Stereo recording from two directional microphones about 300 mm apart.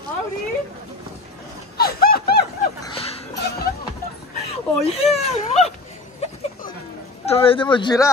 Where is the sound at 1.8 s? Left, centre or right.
Left.